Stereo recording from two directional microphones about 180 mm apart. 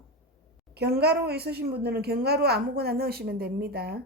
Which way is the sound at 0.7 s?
65° right (ahead or behind).